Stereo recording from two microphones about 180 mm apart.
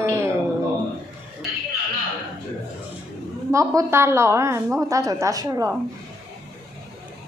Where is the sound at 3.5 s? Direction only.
15° right (ahead or behind).